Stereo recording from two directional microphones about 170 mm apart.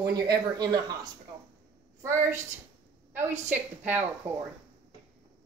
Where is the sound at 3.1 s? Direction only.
45° right (ahead or behind).